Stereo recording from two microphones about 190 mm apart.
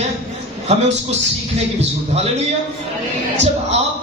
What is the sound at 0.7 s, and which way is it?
A man's voice, 35° right (ahead or behind).